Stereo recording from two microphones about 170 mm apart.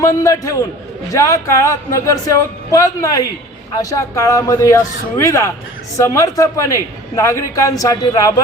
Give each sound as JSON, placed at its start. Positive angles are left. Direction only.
{"t": 0.0, "sound": "a man's voice", "side_deg": 15}